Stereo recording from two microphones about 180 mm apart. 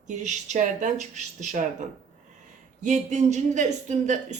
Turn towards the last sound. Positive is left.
turn(degrees=-40)  # may be behind; listen again after turning